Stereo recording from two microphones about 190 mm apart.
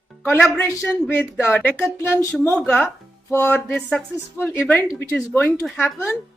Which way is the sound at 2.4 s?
5° left (ahead or behind).